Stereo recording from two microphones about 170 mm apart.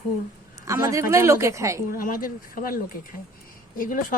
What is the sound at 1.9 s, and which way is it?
Speech, 55° left (ahead or behind).